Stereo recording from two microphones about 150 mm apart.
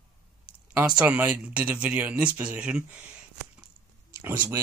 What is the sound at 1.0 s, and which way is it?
Speech, 10° right (ahead or behind).